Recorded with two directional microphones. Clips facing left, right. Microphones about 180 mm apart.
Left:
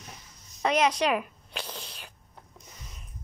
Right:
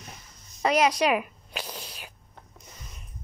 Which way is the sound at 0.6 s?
5° right (ahead or behind).